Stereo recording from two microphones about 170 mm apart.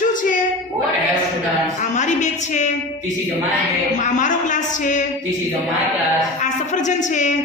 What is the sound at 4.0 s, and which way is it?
A man's voice, 45° left (ahead or behind).